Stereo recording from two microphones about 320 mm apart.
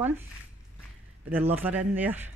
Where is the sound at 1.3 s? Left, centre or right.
Centre.